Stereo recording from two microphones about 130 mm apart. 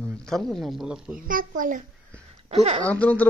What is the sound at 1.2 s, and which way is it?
Speech, 90° right.